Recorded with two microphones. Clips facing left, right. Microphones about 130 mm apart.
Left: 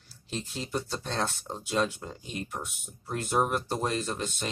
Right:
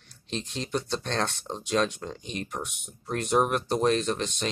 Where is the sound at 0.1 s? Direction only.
5° left (ahead or behind).